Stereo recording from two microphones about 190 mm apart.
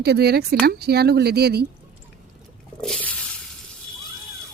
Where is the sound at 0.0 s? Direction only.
55° right (ahead or behind).